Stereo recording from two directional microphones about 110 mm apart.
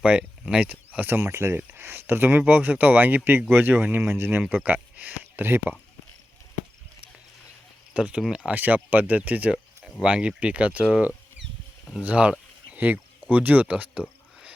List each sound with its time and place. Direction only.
0.0 s speech: 10° right (ahead or behind)
3.8 s speech: 10° right (ahead or behind)
4.1 s speech: 20° right (ahead or behind)
7.9 s speech: 10° right (ahead or behind)
12.0 s a sound: 10° right (ahead or behind)
13.3 s speech: 15° right (ahead or behind)